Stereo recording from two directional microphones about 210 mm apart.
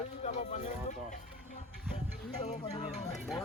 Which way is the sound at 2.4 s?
30° left (ahead or behind).